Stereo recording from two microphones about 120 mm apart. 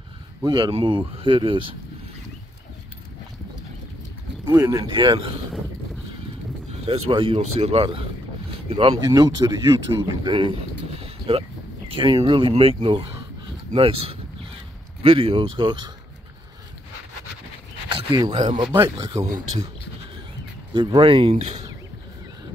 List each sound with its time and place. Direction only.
0.4 s speech: 40° right (ahead or behind)
4.5 s speech: 25° right (ahead or behind)
4.8 s speech: 40° right (ahead or behind)
6.7 s a sound: 60° right (ahead or behind)
7.1 s speech: 50° right (ahead or behind)
9.0 s speech: 35° right (ahead or behind)
11.0 s a sound: 50° right (ahead or behind)
11.9 s speech: 40° right (ahead or behind)
17.8 s a sound: 40° right (ahead or behind)
18.3 s speech: 75° right (ahead or behind)
20.7 s speech: 40° right (ahead or behind)